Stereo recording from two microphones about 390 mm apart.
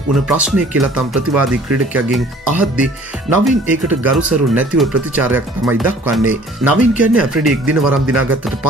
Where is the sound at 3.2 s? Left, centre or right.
Centre.